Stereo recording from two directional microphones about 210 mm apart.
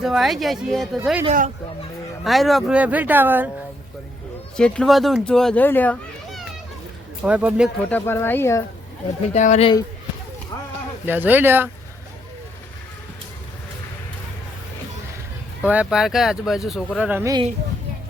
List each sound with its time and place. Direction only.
0.0 s a child's voice: centre (ahead or behind)
1.2 s speech: 35° right (ahead or behind)
2.2 s speech: centre (ahead or behind)
4.5 s a child's voice: 5° left (ahead or behind)
7.3 s speech: 5° right (ahead or behind)
7.9 s speech: 10° left (ahead or behind)
9.3 s speech: 35° left (ahead or behind)
11.0 s speech: 10° right (ahead or behind)
15.6 s a child's voice: 5° right (ahead or behind)